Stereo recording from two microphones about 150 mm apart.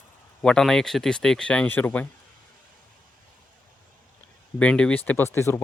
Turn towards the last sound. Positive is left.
turn(degrees=20)  # may be behind; listen again after turning